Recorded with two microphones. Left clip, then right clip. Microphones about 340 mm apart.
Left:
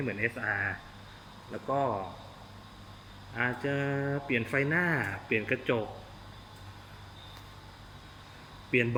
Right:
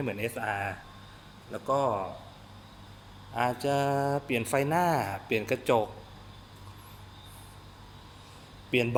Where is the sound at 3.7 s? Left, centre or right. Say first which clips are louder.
Right 5 dB; centre.